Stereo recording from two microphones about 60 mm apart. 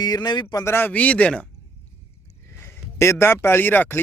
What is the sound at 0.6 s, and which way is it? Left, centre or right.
Speech, left.